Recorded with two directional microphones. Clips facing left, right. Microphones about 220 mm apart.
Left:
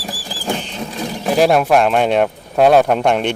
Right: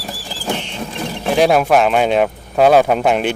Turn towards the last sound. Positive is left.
turn(degrees=-5)  # may be behind; listen again after turning